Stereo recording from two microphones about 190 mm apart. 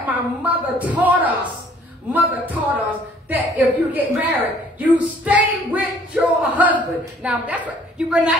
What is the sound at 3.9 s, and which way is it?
A woman's voice, 10° right (ahead or behind).